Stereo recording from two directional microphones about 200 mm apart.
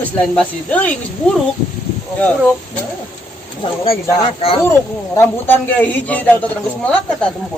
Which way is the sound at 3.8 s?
30° left (ahead or behind).